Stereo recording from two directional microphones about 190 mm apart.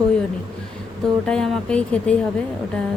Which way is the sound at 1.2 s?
5° left (ahead or behind).